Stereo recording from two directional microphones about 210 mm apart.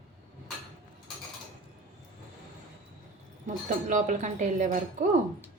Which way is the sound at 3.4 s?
40° right (ahead or behind).